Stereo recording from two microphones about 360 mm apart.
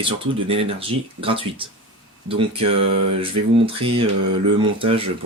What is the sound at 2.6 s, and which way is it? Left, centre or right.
Mantra, right.